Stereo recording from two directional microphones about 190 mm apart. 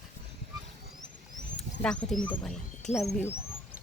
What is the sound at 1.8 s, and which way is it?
Speech, 5° left (ahead or behind).